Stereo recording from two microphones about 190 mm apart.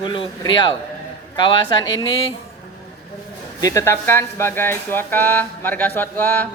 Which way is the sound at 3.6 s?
15° left (ahead or behind).